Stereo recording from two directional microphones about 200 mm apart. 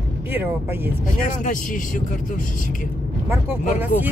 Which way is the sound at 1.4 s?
40° left (ahead or behind).